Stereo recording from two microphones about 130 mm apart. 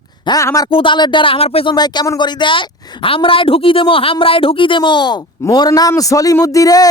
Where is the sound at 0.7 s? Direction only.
40° left (ahead or behind).